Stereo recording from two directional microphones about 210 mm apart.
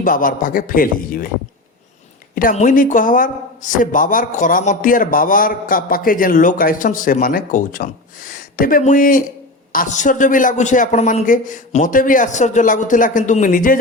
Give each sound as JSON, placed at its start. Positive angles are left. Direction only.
{"t": 0.0, "sound": "a man's voice", "side_deg": 40}
{"t": 2.3, "sound": "a man's voice", "side_deg": 40}